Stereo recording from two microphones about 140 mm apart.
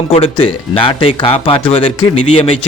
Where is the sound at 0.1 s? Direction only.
45° left (ahead or behind).